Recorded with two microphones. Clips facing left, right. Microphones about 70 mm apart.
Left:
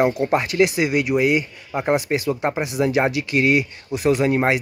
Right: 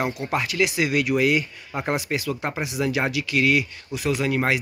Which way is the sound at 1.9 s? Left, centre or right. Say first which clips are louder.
Left 5 dB; left.